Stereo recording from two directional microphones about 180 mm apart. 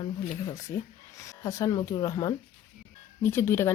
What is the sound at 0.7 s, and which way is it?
Speech, 15° left (ahead or behind).